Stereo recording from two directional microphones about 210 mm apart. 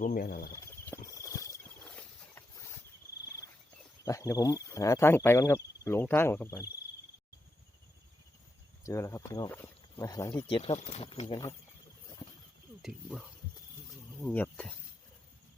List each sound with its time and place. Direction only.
0.0 s speech: 45° left (ahead or behind)
0.5 s horse: 15° left (ahead or behind)
4.0 s cricket: 15° left (ahead or behind)
8.8 s speech: 15° left (ahead or behind)
10.4 s speech: 25° left (ahead or behind)
12.8 s speech: centre (ahead or behind)